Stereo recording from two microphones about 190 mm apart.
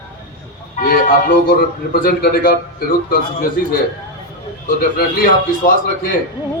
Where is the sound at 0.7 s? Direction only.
45° left (ahead or behind).